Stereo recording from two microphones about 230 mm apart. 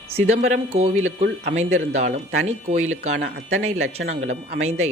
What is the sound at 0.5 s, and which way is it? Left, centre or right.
Speech, right.